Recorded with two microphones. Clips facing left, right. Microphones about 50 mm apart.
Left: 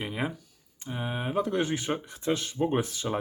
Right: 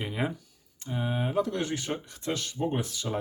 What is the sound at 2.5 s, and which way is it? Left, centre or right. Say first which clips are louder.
Speech: left 3 dB; left.